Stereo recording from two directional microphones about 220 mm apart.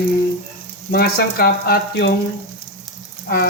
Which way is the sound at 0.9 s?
45° left (ahead or behind).